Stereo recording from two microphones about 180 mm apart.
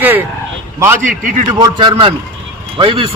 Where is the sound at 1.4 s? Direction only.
20° right (ahead or behind).